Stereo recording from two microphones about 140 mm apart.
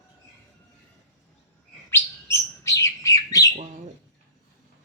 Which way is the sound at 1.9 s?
20° left (ahead or behind).